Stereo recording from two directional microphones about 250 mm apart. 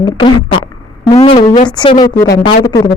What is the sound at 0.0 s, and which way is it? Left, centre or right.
Speech, centre.